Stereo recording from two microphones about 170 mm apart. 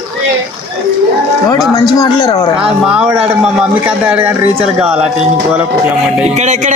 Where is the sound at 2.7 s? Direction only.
5° right (ahead or behind).